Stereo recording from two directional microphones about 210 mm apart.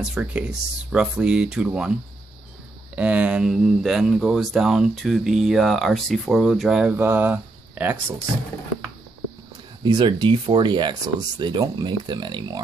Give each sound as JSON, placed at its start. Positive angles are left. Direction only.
{"t": 0.0, "sound": "speech", "side_deg": -5}
{"t": 3.0, "sound": "speech", "side_deg": -5}
{"t": 9.8, "sound": "speech", "side_deg": -20}